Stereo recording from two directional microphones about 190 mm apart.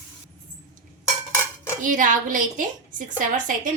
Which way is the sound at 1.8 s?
45° right (ahead or behind).